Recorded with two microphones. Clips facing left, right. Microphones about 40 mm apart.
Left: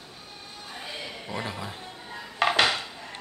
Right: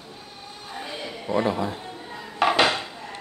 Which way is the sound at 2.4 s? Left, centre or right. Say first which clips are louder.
Right 3 dB; centre.